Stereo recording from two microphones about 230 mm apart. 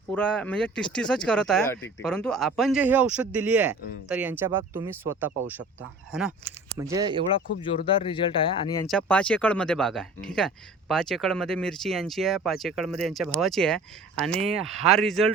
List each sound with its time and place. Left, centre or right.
0.1 s speech: centre
6.1 s speech: centre
6.9 s speech: right
7.6 s speech: left
8.9 s speech: centre